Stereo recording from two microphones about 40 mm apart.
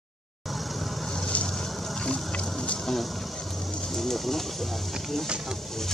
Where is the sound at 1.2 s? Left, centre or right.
Left.